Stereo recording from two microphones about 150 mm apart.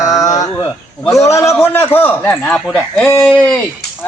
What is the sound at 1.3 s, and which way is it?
A man's voice, 20° left (ahead or behind).